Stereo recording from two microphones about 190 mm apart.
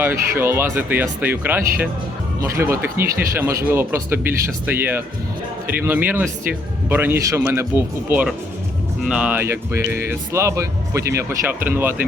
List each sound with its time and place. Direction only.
0.0 s speech: 10° right (ahead or behind)